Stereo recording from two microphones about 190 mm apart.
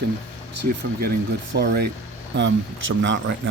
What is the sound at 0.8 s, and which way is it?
Speech, 55° right (ahead or behind).